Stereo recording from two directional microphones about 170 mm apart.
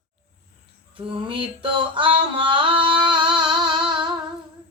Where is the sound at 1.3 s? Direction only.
30° right (ahead or behind).